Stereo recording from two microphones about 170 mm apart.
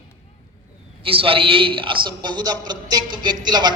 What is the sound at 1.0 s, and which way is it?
A woman's voice, 30° right (ahead or behind).